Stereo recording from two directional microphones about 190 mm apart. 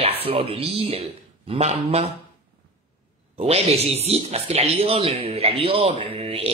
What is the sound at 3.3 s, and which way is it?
Speech, 35° right (ahead or behind).